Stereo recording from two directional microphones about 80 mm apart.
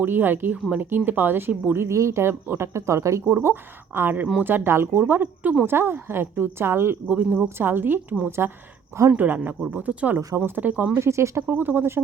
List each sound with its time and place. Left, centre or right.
0.0 s a woman's voice: right
3.3 s a woman's voice: right
7.1 s a woman's voice: centre
10.2 s a woman's voice: right
11.0 s speech: right
11.4 s a woman's voice: right